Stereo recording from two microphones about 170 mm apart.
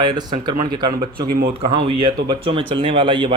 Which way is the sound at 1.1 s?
60° right (ahead or behind).